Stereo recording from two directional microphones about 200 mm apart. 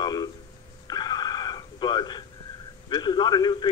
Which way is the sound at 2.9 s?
20° left (ahead or behind).